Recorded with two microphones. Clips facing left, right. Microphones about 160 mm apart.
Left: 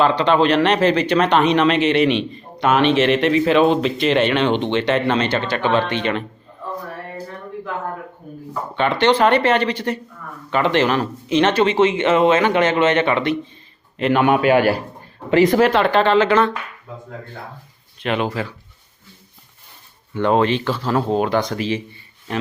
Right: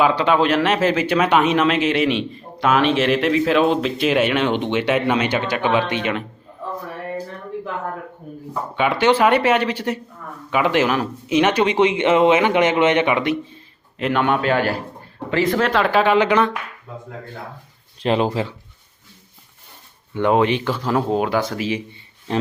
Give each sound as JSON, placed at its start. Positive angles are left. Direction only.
{"t": 0.0, "sound": "speech", "side_deg": -10}
{"t": 8.7, "sound": "speech", "side_deg": -10}
{"t": 14.0, "sound": "a man's voice", "side_deg": 5}
{"t": 15.6, "sound": "speech", "side_deg": 0}
{"t": 18.0, "sound": "speech", "side_deg": -30}
{"t": 20.1, "sound": "speech", "side_deg": -15}